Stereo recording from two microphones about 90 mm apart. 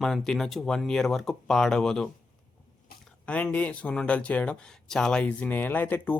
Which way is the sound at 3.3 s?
15° left (ahead or behind).